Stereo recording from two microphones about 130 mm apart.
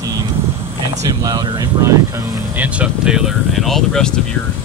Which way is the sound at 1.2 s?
30° right (ahead or behind).